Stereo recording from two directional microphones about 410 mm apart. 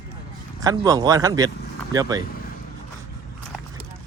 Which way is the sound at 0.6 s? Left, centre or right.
Centre.